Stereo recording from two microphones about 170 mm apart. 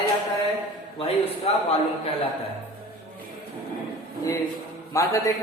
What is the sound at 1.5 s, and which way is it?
Speech, 35° left (ahead or behind).